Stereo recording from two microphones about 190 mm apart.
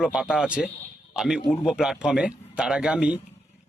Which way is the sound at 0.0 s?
5° right (ahead or behind).